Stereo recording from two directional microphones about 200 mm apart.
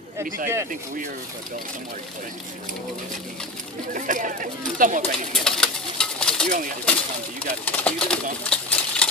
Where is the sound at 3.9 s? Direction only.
40° right (ahead or behind).